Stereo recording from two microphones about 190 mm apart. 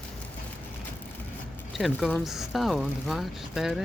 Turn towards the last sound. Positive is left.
turn(degrees=0)  # may be behind; listen again after turning